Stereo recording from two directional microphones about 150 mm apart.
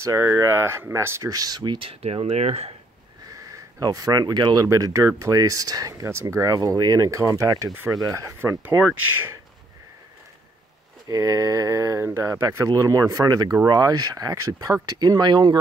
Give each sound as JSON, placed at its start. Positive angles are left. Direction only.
{"t": 0.0, "sound": "speech", "side_deg": -20}
{"t": 3.3, "sound": "speech", "side_deg": -20}
{"t": 11.1, "sound": "speech", "side_deg": -20}